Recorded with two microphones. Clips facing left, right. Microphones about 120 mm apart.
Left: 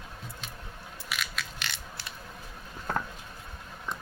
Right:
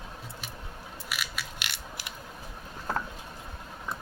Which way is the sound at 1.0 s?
5° right (ahead or behind).